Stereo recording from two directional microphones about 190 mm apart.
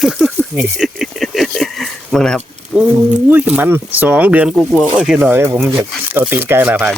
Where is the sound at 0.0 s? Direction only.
5° right (ahead or behind).